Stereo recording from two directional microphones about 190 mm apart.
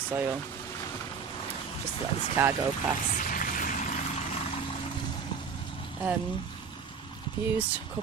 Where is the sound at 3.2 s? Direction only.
45° left (ahead or behind).